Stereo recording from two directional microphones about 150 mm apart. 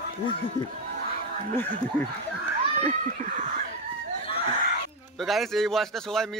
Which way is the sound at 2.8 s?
55° right (ahead or behind).